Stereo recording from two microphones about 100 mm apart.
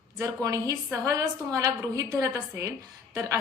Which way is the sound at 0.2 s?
35° right (ahead or behind).